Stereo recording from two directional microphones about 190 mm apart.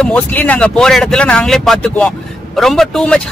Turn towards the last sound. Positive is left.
turn(degrees=5)  # may be behind; listen again after turning